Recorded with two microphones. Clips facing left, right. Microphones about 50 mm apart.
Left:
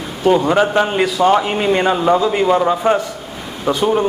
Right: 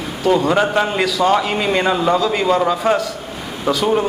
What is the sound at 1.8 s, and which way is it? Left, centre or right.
A man's voice, centre.